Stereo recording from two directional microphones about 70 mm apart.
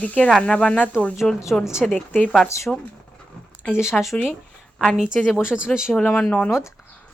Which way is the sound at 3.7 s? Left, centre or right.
Centre.